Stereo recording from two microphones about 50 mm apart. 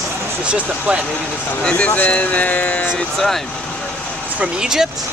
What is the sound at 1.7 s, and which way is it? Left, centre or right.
Speech, left.